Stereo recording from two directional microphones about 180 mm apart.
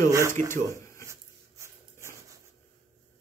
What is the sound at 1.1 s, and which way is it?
Dog, 15° right (ahead or behind).